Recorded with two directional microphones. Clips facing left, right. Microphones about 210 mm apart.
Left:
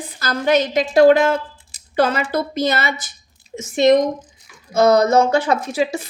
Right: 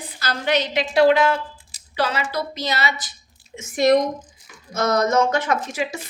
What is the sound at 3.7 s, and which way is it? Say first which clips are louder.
A woman's voice: left 3 dB; 25° left (ahead or behind).